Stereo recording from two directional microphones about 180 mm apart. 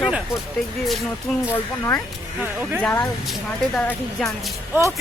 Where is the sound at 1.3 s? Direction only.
Centre (ahead or behind).